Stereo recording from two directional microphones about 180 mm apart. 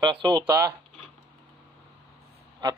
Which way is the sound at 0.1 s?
25° right (ahead or behind).